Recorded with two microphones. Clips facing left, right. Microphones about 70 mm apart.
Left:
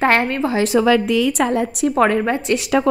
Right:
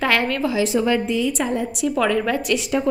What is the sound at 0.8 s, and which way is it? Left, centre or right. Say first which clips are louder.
A woman's voice: left 5 dB; left.